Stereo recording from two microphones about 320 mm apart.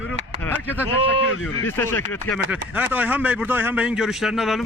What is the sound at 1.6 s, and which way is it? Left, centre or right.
Speech, centre.